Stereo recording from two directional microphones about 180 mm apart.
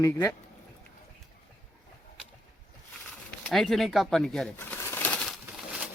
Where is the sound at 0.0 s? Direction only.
15° left (ahead or behind).